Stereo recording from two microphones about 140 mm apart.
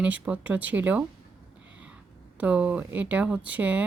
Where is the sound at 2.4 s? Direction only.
10° right (ahead or behind).